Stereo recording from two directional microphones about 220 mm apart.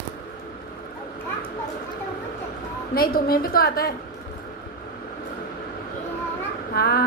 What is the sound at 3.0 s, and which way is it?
Speech, 40° left (ahead or behind).